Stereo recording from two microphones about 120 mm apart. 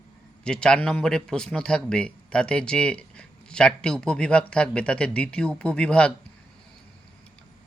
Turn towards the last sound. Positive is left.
turn(degrees=10)  # may be behind; listen again after turning